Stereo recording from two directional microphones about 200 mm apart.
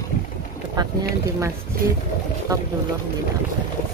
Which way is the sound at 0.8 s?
20° right (ahead or behind).